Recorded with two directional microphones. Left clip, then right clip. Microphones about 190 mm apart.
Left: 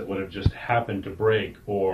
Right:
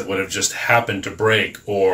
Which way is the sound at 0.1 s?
25° right (ahead or behind).